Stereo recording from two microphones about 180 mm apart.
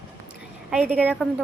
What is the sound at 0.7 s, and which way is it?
Speech, 5° right (ahead or behind).